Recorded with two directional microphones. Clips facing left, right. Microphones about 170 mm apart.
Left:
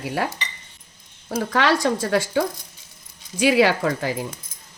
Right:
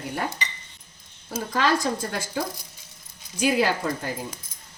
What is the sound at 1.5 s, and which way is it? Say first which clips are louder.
Speech: left 3 dB; 80° left.